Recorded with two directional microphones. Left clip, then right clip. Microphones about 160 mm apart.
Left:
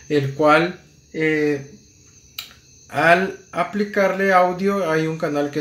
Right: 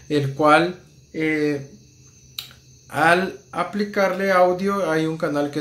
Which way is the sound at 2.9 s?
15° left (ahead or behind).